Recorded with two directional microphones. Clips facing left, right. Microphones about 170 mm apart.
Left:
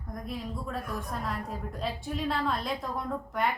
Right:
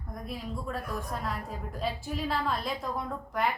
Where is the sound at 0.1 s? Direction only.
Centre (ahead or behind).